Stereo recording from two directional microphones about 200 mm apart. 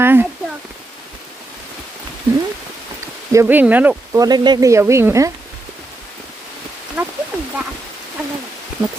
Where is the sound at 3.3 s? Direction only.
10° right (ahead or behind).